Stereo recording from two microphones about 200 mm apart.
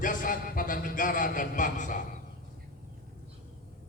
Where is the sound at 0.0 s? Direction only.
40° left (ahead or behind).